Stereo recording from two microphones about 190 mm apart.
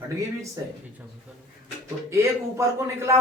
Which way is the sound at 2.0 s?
15° right (ahead or behind).